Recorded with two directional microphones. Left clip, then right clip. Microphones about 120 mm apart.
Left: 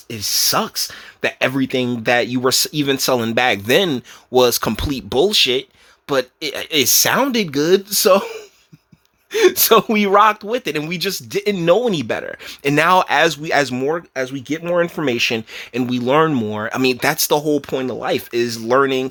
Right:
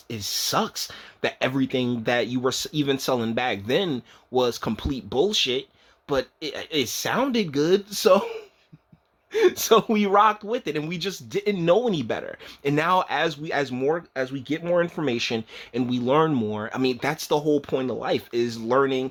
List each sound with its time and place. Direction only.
0.1 s speech: 20° left (ahead or behind)
9.3 s speech: 35° left (ahead or behind)
12.6 s speech: 40° left (ahead or behind)
13.8 s speech: 30° left (ahead or behind)